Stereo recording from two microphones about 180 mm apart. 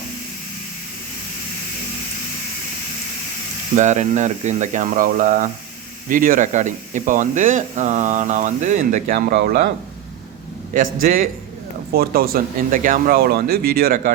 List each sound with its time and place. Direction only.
3.8 s speech: 40° right (ahead or behind)
9.1 s speech: 70° right (ahead or behind)
10.8 s speech: 50° right (ahead or behind)